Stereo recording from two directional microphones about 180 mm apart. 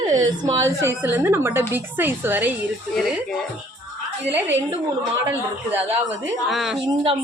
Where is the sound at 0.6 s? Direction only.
15° right (ahead or behind).